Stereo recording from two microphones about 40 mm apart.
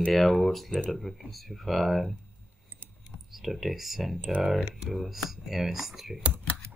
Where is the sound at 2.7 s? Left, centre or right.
Right.